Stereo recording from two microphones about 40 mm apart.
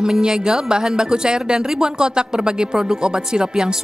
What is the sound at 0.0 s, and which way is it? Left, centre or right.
Speech, centre.